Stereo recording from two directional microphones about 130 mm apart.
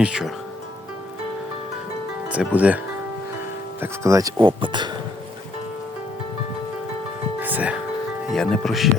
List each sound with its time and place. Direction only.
0.0 s speech: 5° right (ahead or behind)
2.3 s speech: 10° right (ahead or behind); by 4.9 s 35° right (ahead or behind)
7.3 s music: 15° right (ahead or behind)
8.3 s speech: centre (ahead or behind)